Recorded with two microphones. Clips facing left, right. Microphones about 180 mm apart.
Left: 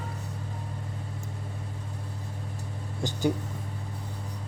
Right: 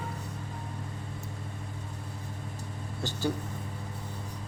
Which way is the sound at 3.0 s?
15° left (ahead or behind).